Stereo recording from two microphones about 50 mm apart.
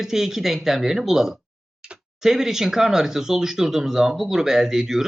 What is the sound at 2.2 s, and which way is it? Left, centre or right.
Speech, centre.